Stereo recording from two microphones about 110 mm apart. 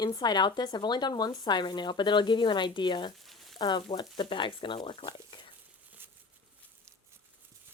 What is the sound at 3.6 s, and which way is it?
Speech, 40° left (ahead or behind).